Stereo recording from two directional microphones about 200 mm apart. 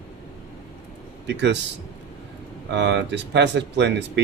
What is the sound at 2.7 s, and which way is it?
Speech, 60° right (ahead or behind).